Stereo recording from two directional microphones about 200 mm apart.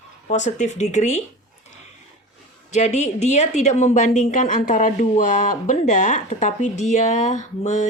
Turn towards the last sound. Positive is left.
turn(degrees=35)  # may be behind; listen again after turning